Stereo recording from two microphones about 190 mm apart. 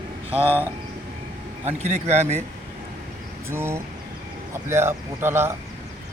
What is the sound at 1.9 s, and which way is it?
Speech, 35° right (ahead or behind).